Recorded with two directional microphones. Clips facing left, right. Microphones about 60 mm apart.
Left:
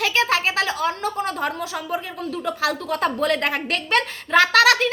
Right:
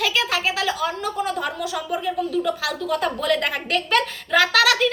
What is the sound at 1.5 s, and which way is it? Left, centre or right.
A woman's voice, left.